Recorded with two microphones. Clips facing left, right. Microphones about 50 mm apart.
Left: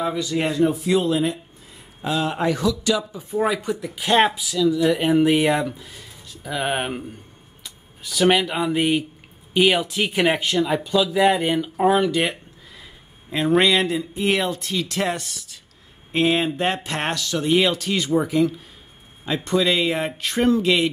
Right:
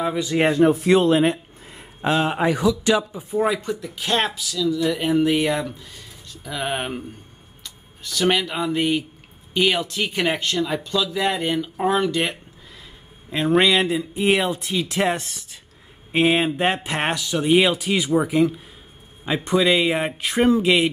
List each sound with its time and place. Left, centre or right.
0.2 s speech: right
2.3 s speech: centre
3.3 s speech: centre; by 15.6 s right
16.1 s speech: centre